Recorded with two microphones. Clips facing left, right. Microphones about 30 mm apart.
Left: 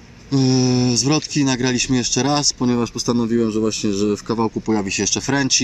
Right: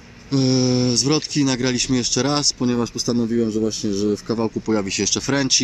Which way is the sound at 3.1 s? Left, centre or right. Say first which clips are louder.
Left 2 dB; left.